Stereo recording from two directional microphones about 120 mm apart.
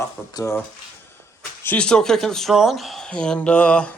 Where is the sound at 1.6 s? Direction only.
10° left (ahead or behind).